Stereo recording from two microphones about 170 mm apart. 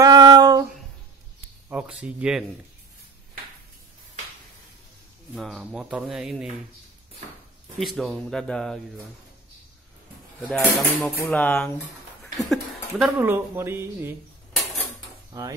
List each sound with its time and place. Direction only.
0.0 s a sound: 25° right (ahead or behind)
1.7 s speech: 5° right (ahead or behind)
5.3 s speech: centre (ahead or behind)
7.8 s speech: centre (ahead or behind)
10.4 s speech: centre (ahead or behind)
12.4 s a sound: centre (ahead or behind)
13.2 s speech: 15° right (ahead or behind)
15.3 s hammer: 20° right (ahead or behind)